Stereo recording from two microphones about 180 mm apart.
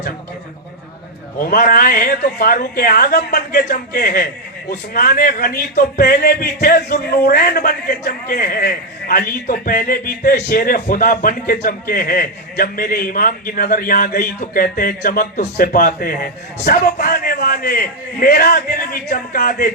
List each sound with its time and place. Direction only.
1.4 s a man's voice: 55° left (ahead or behind)
10.6 s a man's voice: 50° left (ahead or behind)